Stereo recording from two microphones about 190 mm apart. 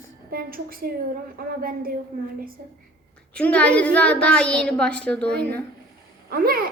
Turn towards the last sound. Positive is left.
turn(degrees=-50)  # may be behind; listen again after turning